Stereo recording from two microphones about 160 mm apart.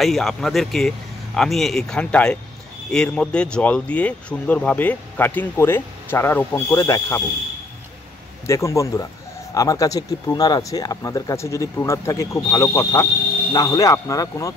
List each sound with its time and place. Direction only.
0.0 s speech: centre (ahead or behind); by 7.2 s 20° left (ahead or behind)
8.5 s speech: 20° left (ahead or behind)